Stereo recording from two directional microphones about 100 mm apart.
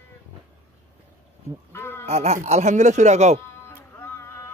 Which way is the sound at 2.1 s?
90° right.